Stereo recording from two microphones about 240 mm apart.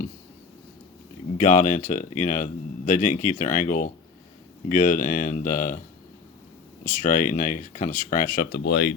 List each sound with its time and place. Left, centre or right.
1.4 s speech: left
6.8 s speech: left
8.6 s speech: left